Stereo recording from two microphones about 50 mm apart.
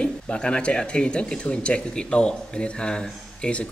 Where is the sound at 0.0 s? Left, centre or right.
Centre.